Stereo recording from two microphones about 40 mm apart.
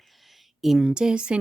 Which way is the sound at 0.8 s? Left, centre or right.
Centre.